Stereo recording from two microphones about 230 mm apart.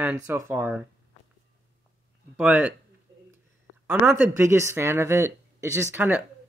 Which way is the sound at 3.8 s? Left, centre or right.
Centre.